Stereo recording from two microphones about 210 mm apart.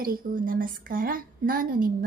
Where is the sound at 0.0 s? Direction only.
45° right (ahead or behind).